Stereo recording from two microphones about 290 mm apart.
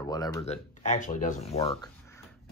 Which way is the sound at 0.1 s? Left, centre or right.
Centre.